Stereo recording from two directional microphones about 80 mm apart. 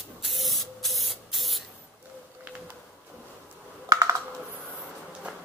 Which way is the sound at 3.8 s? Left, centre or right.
Right.